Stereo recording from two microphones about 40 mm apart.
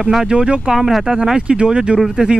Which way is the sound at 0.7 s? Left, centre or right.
Centre.